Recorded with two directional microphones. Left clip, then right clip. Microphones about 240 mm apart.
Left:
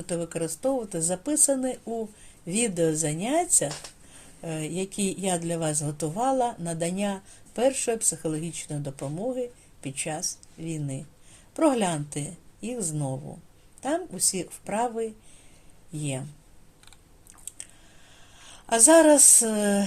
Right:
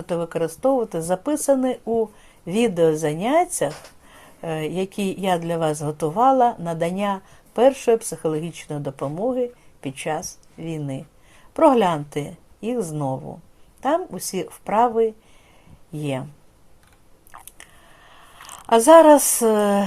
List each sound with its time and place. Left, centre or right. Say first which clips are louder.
0.0 s a woman's voice: right 7 dB; centre
13.8 s a woman's voice: right 6 dB; centre
17.3 s biting: right 6 dB; right
18.6 s speech: right 7 dB; centre